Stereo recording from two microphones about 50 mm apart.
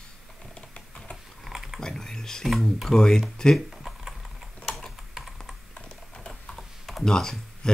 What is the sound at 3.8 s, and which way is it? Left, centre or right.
Typing, centre.